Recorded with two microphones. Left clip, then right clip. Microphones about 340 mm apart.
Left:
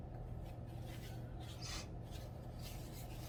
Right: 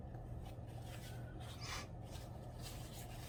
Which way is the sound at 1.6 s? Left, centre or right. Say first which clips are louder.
Right 1 dB; centre.